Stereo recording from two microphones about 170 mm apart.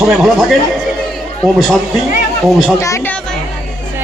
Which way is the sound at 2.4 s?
Centre (ahead or behind).